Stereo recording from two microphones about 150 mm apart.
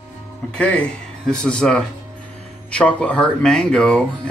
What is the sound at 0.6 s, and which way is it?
Speech, 5° left (ahead or behind).